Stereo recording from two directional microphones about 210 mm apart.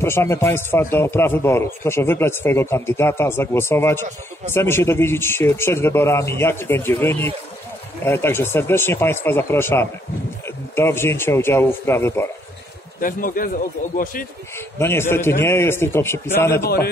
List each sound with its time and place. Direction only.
0.0 s a man's voice: 10° left (ahead or behind)
13.0 s a man's voice: 40° left (ahead or behind)
14.8 s a man's voice: 10° left (ahead or behind)